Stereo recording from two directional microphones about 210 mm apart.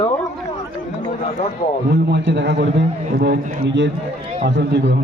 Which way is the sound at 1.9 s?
55° right (ahead or behind).